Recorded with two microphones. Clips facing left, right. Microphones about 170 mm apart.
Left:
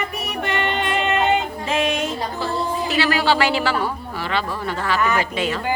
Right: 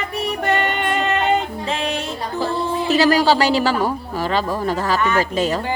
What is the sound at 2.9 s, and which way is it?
A man's voice, 40° right (ahead or behind).